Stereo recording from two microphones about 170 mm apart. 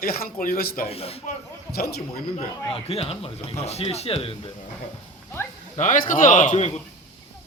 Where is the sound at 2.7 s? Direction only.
35° left (ahead or behind).